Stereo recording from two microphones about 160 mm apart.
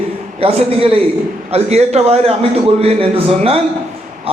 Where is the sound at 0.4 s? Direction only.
35° right (ahead or behind).